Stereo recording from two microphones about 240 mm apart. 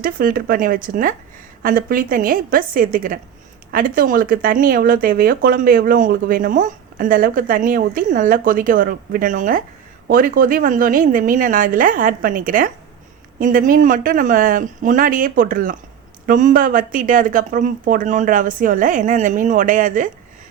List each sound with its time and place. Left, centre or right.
0.0 s speech: right